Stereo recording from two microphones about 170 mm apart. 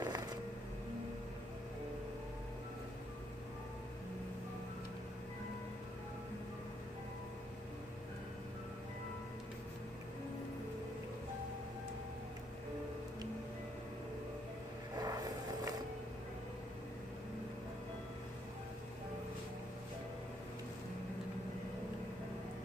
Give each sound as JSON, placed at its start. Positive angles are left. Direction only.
{"t": 0.0, "sound": "music", "side_deg": -25}
{"t": 14.9, "sound": "vehicle", "side_deg": -20}